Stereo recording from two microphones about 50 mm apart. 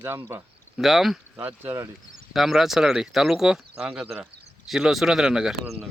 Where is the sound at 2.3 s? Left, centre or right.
Centre.